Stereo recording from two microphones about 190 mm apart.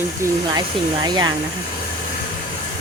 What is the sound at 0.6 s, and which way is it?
Speech, 20° right (ahead or behind).